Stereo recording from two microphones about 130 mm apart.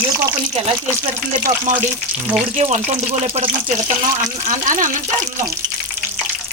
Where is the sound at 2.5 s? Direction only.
65° right (ahead or behind).